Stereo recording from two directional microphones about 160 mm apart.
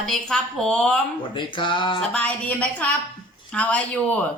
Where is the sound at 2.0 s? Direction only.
10° left (ahead or behind).